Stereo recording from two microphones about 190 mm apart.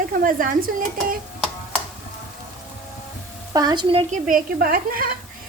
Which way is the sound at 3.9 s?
45° right (ahead or behind).